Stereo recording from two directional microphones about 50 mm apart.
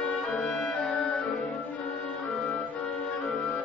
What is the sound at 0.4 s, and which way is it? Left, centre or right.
Music, centre.